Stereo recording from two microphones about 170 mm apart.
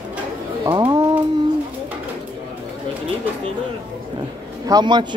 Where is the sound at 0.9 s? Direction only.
25° right (ahead or behind).